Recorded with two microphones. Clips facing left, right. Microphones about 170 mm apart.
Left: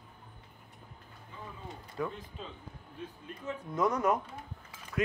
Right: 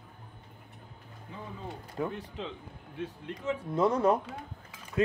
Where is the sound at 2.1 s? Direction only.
75° right (ahead or behind).